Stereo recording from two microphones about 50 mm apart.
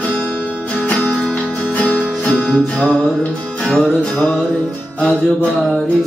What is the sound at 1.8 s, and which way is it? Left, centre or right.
Music, left.